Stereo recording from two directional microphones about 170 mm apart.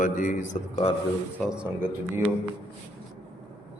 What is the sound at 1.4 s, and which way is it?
Speech, 5° right (ahead or behind).